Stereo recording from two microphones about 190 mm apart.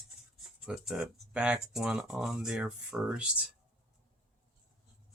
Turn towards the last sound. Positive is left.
turn(degrees=-5)  # may be behind; listen again after turning